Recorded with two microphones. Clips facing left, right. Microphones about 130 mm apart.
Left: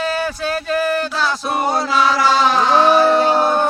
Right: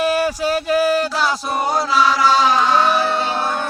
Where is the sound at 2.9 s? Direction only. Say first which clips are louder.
Left 6 dB; 45° left (ahead or behind).